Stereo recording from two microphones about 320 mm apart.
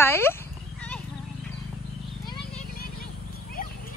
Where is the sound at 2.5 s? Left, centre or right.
Left.